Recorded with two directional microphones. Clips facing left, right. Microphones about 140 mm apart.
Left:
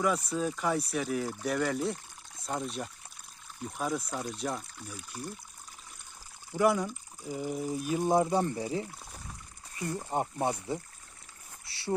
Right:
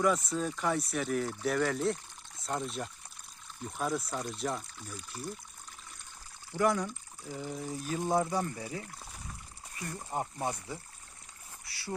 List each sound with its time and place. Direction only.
0.0 s speech: centre (ahead or behind)
6.5 s speech: 10° left (ahead or behind); by 11.9 s 25° left (ahead or behind)